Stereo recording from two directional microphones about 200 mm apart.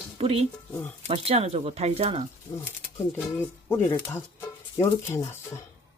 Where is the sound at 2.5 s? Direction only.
15° left (ahead or behind).